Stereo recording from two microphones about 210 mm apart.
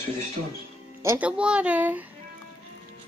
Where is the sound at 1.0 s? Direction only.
10° right (ahead or behind).